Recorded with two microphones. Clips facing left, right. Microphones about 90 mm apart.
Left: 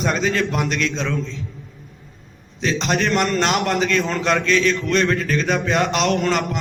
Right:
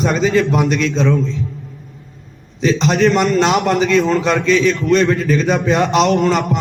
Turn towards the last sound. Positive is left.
turn(degrees=0)  # may be behind; listen again after turning